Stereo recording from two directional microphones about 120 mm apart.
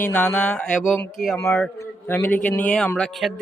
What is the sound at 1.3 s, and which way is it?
A man's voice, 20° left (ahead or behind).